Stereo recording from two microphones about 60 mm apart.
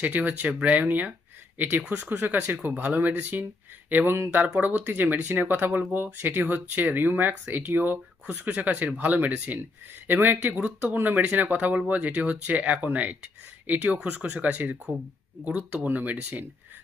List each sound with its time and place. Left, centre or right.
0.0 s speech: right
2.0 s speech: right